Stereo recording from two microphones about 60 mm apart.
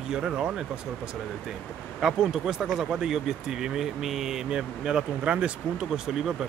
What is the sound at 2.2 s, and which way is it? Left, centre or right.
Speech, centre.